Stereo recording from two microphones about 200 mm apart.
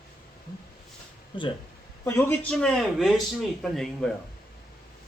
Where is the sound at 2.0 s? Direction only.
10° left (ahead or behind).